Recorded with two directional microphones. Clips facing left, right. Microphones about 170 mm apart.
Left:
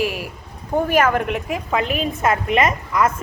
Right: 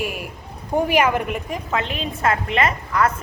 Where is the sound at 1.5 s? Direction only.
5° left (ahead or behind).